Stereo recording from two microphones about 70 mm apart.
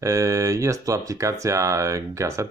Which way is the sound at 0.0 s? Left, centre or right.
Right.